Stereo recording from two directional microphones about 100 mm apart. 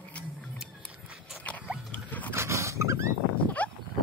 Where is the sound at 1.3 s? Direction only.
15° left (ahead or behind).